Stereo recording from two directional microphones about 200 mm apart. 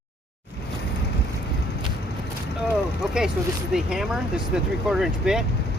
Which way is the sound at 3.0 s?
5° right (ahead or behind).